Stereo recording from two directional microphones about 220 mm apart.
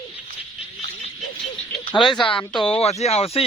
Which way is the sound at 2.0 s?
20° left (ahead or behind).